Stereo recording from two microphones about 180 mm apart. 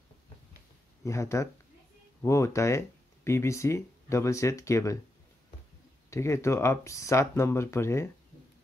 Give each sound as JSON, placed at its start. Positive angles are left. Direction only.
{"t": 1.0, "sound": "speech", "side_deg": 15}
{"t": 6.0, "sound": "speech", "side_deg": 15}